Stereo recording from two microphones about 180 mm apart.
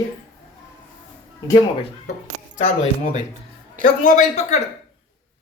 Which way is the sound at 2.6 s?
45° left (ahead or behind).